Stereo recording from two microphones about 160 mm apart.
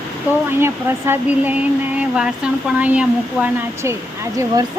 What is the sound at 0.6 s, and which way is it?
Speech, 15° right (ahead or behind).